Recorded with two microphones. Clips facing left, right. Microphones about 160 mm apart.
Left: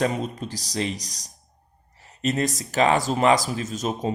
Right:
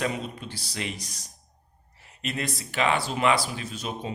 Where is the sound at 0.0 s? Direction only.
40° left (ahead or behind).